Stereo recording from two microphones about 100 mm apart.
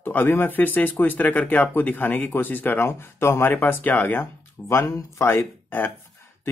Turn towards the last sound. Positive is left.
turn(degrees=20)  # may be behind; listen again after turning